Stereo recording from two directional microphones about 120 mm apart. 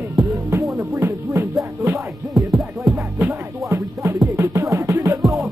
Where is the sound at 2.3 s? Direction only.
Centre (ahead or behind).